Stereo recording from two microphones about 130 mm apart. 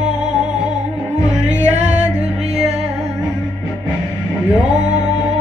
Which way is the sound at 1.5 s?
65° right (ahead or behind).